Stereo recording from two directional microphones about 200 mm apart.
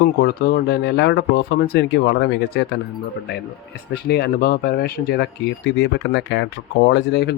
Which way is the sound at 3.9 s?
55° left (ahead or behind).